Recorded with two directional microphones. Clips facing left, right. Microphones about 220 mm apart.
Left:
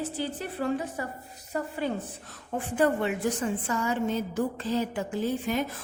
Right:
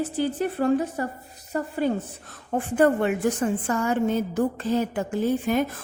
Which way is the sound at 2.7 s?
50° right (ahead or behind).